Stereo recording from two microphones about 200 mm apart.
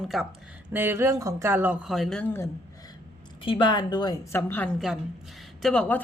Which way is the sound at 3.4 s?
25° left (ahead or behind).